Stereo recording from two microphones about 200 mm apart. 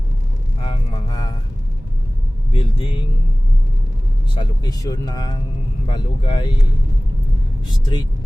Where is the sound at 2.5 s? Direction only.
25° left (ahead or behind).